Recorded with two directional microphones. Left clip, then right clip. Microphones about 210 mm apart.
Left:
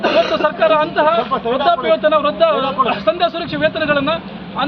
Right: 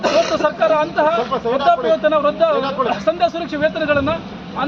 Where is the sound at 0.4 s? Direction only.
Centre (ahead or behind).